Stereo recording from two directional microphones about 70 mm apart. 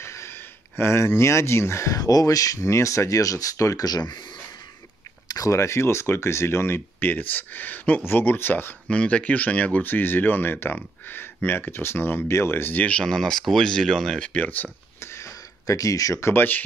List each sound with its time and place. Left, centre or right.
0.0 s speech: left
5.3 s a sound: left
5.6 s speech: left
8.8 s speech: centre; by 12.8 s left
13.0 s speech: centre
14.2 s speech: left
15.0 s a sound: left